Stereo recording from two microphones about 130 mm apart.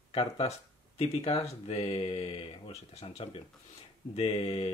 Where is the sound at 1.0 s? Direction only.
55° left (ahead or behind).